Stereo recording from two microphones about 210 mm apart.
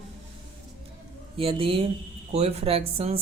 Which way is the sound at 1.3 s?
25° right (ahead or behind).